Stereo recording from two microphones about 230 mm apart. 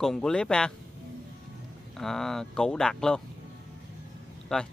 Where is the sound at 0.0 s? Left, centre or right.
Centre.